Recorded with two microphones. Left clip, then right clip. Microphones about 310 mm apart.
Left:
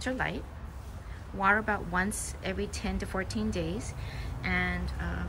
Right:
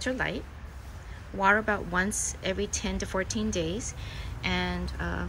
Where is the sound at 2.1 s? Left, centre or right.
Left.